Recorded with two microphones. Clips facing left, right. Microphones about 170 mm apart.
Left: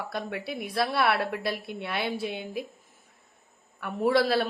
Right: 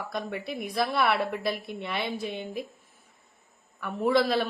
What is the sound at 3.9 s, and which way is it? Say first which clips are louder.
Speech: even; 5° left (ahead or behind).